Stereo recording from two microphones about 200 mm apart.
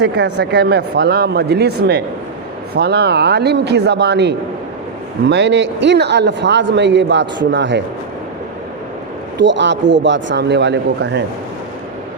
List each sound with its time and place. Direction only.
0.0 s speech: 60° right (ahead or behind)
9.4 s speech: 65° right (ahead or behind)